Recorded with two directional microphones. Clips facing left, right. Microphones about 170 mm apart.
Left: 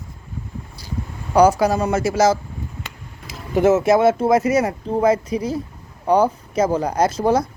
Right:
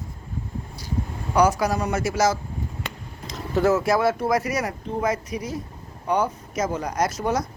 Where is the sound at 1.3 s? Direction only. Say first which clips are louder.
Left 6 dB; 30° left (ahead or behind).